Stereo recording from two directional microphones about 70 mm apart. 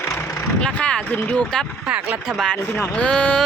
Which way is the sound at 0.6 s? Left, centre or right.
Centre.